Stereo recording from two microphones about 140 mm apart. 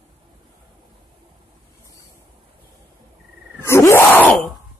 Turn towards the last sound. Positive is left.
turn(degrees=15)  # may be behind; listen again after turning